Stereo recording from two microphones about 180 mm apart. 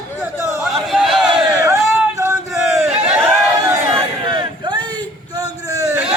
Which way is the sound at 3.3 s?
15° right (ahead or behind).